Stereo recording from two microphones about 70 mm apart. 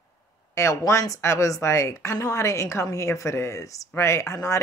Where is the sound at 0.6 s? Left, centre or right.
Left.